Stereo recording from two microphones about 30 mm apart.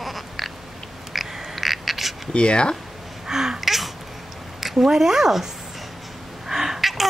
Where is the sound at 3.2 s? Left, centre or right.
Centre.